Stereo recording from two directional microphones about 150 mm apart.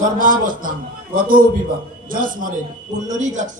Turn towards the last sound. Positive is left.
turn(degrees=-55)  # may be behind; listen again after turning